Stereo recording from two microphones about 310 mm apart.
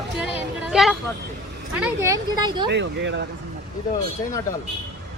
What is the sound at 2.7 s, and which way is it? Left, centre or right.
Speech, right.